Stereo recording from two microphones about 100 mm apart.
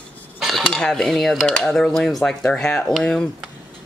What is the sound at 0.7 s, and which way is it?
Speech, 5° left (ahead or behind).